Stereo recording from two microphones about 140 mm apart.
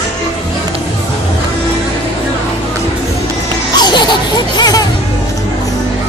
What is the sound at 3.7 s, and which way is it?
Baby cry, 30° left (ahead or behind).